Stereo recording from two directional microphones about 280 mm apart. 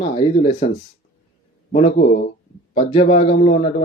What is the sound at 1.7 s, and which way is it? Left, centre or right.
Speech, left.